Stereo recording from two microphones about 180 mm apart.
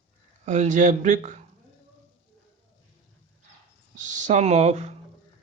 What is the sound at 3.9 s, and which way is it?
Speech, 45° right (ahead or behind).